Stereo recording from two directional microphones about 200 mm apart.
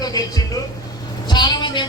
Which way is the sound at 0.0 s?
20° left (ahead or behind).